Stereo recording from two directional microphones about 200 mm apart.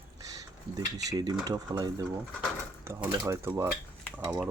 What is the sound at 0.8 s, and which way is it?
Speech, 20° right (ahead or behind).